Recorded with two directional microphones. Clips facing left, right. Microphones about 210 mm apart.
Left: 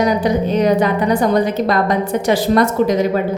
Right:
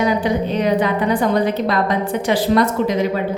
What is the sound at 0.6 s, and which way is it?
A woman's voice, 45° left (ahead or behind).